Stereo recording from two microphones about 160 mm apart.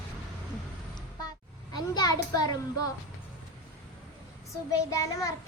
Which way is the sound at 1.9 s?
25° left (ahead or behind).